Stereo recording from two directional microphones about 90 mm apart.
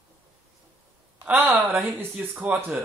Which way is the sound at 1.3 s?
20° right (ahead or behind).